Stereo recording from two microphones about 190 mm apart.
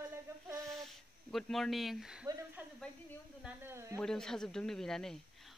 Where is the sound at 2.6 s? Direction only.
10° right (ahead or behind).